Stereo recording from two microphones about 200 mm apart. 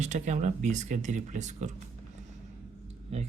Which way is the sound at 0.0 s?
35° right (ahead or behind).